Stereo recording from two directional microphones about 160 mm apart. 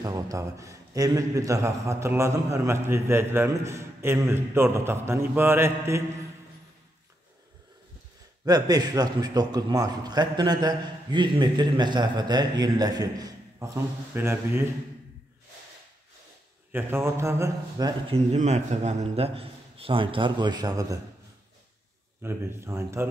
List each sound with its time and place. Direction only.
0.0 s a man's voice: 20° right (ahead or behind)
8.5 s a man's voice: 25° right (ahead or behind)
16.7 s a man's voice: 15° right (ahead or behind)
18.1 s a man's voice: 45° right (ahead or behind); by 21.0 s 25° right (ahead or behind)
22.2 s a man's voice: 15° right (ahead or behind)